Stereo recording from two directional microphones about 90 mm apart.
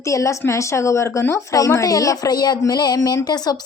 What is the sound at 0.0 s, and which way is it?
A woman's voice, 35° left (ahead or behind).